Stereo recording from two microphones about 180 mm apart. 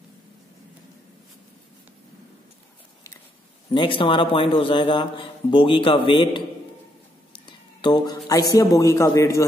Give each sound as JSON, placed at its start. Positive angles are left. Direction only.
{"t": 3.7, "sound": "speech", "side_deg": 30}
{"t": 7.3, "sound": "a sound", "side_deg": 25}
{"t": 8.3, "sound": "a man's voice", "side_deg": 20}